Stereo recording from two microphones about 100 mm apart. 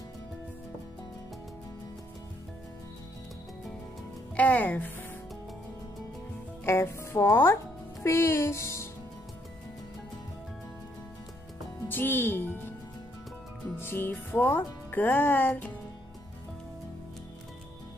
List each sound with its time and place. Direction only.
4.4 s speech: 15° left (ahead or behind)
6.6 s speech: 25° left (ahead or behind)
11.9 s speech: 20° left (ahead or behind)
13.7 s speech: 20° left (ahead or behind)